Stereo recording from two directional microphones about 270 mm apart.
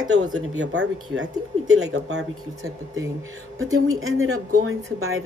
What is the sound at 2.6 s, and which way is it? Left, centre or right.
Speech, centre.